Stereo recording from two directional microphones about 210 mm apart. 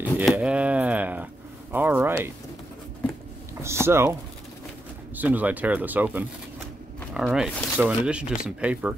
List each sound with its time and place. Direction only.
0.0 s a sound: 5° right (ahead or behind)
1.7 s speech: 10° right (ahead or behind)
3.6 s speech: 10° right (ahead or behind)
5.1 s speech: 10° right (ahead or behind)